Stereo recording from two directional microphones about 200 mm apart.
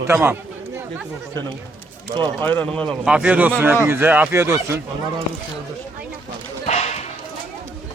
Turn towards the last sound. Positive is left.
turn(degrees=35)  # may be behind; listen again after turning